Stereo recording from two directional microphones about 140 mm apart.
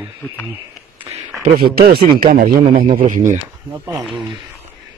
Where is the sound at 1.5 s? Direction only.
90° right.